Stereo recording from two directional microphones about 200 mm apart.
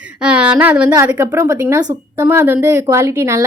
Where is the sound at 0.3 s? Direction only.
5° right (ahead or behind).